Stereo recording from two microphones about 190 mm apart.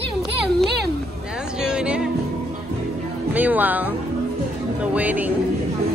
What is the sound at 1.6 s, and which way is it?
Music, 5° right (ahead or behind).